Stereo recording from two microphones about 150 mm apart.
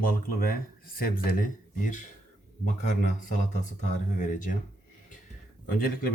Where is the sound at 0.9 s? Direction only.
75° left (ahead or behind); by 4.5 s 55° left (ahead or behind).